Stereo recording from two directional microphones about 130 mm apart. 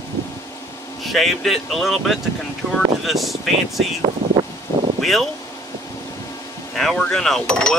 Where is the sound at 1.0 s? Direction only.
Centre (ahead or behind).